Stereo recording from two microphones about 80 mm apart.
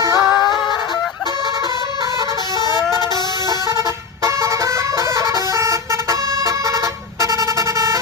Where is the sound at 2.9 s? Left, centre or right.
Left.